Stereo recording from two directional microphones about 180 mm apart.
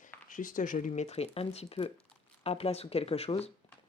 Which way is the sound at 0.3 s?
45° left (ahead or behind).